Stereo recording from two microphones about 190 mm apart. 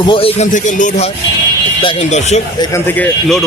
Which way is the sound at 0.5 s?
40° left (ahead or behind).